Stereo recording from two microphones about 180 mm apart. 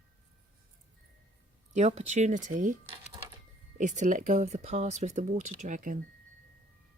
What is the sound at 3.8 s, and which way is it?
Speech, 45° right (ahead or behind).